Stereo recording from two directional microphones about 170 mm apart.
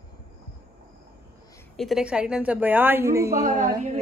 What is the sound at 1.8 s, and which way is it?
A woman's voice, centre (ahead or behind).